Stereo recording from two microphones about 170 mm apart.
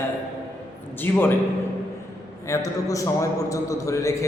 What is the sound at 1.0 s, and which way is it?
Speech, 10° left (ahead or behind).